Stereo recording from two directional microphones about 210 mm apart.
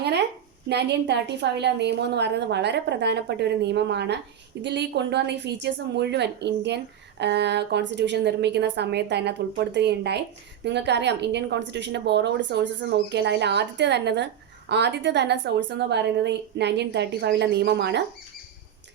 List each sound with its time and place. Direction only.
0.7 s a woman's voice: 55° right (ahead or behind)